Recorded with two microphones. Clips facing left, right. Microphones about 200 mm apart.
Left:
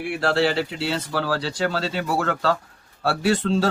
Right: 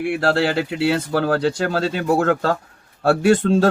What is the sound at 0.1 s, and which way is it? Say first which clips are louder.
Speech: right 1 dB; 55° right (ahead or behind).